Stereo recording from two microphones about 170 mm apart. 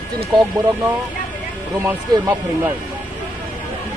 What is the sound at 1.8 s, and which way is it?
Speech, 15° right (ahead or behind).